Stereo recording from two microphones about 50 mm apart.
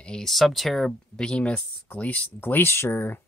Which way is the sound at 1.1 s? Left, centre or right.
Centre.